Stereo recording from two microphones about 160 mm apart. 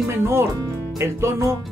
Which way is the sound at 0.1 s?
15° right (ahead or behind).